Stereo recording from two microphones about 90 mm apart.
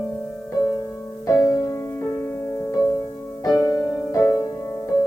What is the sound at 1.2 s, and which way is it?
Music, 35° left (ahead or behind).